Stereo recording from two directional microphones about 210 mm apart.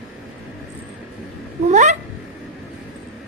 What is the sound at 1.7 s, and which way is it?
Cat, 35° right (ahead or behind).